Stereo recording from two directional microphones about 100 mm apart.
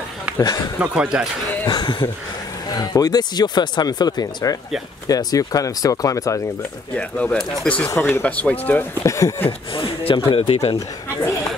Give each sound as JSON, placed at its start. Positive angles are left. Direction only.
{"t": 0.4, "sound": "speech", "side_deg": 40}
{"t": 0.7, "sound": "speech", "side_deg": -10}
{"t": 1.7, "sound": "speech", "side_deg": 45}
{"t": 7.0, "sound": "speech", "side_deg": 10}
{"t": 9.0, "sound": "speech", "side_deg": 30}
{"t": 9.8, "sound": "a man's voice", "side_deg": 65}
{"t": 10.3, "sound": "speech", "side_deg": 80}